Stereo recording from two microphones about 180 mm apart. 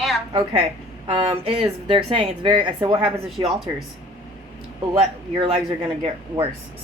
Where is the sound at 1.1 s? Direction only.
30° right (ahead or behind).